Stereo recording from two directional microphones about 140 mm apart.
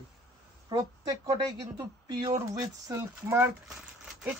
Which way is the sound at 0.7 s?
25° right (ahead or behind).